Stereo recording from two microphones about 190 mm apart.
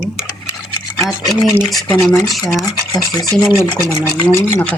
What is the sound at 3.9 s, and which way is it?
Speech, 10° left (ahead or behind).